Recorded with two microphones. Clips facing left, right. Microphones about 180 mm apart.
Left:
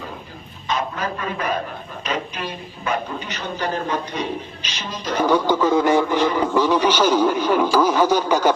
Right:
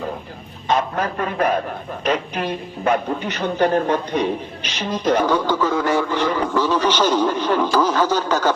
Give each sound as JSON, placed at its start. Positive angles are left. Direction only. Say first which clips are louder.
{"t": 0.7, "sound": "a man's voice", "louder": "right 4 dB", "side_deg": -50}
{"t": 5.2, "sound": "speech", "louder": "left 1 dB", "side_deg": 15}